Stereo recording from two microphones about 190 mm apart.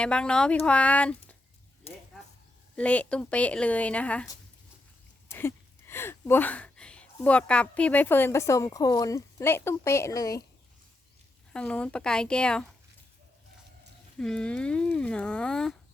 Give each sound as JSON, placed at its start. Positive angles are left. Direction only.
{"t": 0.0, "sound": "a woman's voice", "side_deg": 5}
{"t": 1.9, "sound": "speech", "side_deg": 30}
{"t": 2.7, "sound": "a woman's voice", "side_deg": 5}
{"t": 5.3, "sound": "speech", "side_deg": 15}
{"t": 11.5, "sound": "speech", "side_deg": 5}
{"t": 14.2, "sound": "speech", "side_deg": 5}